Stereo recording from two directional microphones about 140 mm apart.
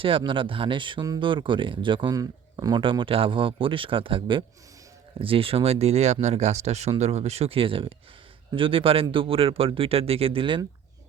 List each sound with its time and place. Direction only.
0.0 s speech: 40° right (ahead or behind)